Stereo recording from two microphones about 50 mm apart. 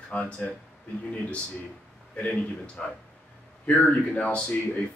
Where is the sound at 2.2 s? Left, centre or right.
Left.